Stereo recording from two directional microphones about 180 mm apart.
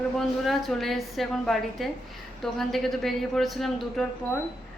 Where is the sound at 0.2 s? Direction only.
Centre (ahead or behind).